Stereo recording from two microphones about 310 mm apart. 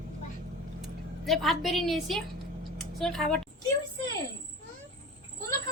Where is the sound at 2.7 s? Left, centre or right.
Centre.